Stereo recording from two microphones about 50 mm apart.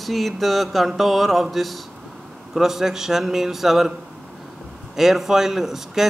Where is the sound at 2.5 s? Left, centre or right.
Centre.